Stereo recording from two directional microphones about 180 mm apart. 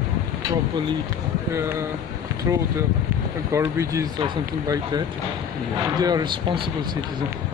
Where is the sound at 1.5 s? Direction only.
15° right (ahead or behind).